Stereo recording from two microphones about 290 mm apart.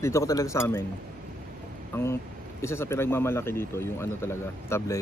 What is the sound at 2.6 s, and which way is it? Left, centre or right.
A man's voice, centre.